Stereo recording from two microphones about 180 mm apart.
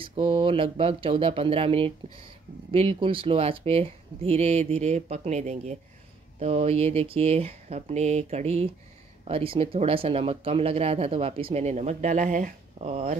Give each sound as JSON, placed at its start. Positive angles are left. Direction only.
{"t": 0.0, "sound": "speech", "side_deg": -30}